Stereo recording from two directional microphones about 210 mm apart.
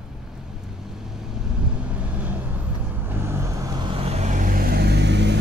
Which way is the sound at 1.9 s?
5° right (ahead or behind).